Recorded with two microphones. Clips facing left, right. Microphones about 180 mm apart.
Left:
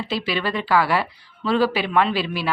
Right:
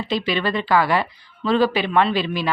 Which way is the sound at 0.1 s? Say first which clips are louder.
Right 3 dB; 5° left (ahead or behind).